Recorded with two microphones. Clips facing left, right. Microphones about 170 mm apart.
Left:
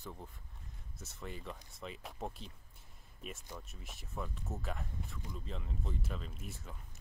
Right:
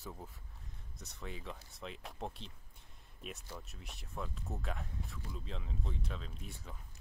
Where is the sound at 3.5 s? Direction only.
Centre (ahead or behind).